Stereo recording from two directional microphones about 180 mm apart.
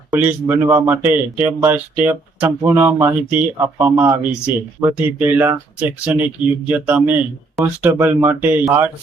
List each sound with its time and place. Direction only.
0.2 s speech: 10° right (ahead or behind)